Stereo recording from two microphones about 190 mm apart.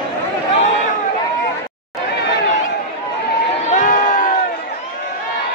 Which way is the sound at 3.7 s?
40° left (ahead or behind).